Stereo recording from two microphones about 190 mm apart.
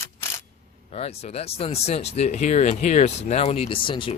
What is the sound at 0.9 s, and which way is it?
Speech, 35° left (ahead or behind).